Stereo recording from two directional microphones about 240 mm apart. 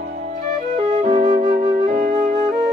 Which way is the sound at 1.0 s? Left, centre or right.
Right.